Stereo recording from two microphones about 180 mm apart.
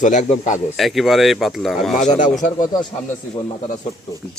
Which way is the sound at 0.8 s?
Centre (ahead or behind).